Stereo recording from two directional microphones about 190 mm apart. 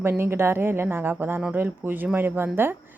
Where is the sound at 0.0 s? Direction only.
10° right (ahead or behind).